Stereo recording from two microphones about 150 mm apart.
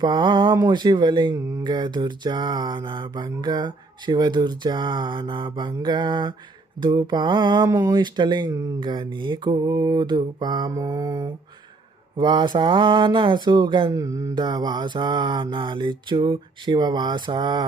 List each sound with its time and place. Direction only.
0.0 s speech: 30° right (ahead or behind)
13.9 s speech: 20° right (ahead or behind)